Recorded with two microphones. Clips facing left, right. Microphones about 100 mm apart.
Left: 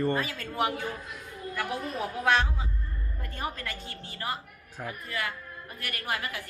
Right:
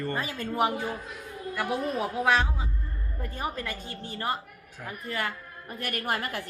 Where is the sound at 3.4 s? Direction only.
20° right (ahead or behind).